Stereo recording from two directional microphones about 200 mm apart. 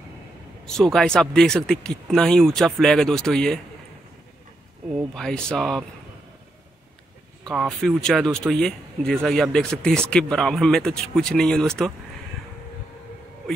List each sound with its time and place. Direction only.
0.7 s speech: centre (ahead or behind)
4.9 s speech: 5° left (ahead or behind)
7.4 s speech: centre (ahead or behind)